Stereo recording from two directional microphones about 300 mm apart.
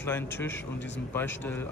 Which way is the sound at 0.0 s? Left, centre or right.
Centre.